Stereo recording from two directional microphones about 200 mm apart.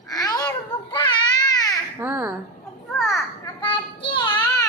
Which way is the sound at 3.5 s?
25° left (ahead or behind).